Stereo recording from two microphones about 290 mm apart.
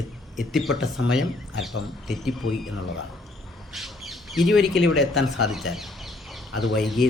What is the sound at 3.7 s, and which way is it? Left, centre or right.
Squawk, centre.